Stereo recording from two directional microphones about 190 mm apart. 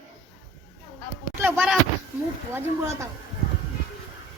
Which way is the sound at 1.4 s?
10° right (ahead or behind).